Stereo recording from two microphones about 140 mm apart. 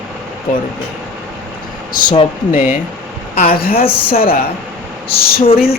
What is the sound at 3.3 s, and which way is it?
Speech, 90° left.